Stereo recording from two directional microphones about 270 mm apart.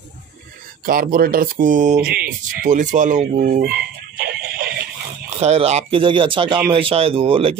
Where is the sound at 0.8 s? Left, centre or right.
Right.